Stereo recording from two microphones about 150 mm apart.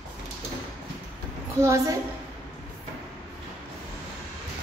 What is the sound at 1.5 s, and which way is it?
Speech, 20° right (ahead or behind).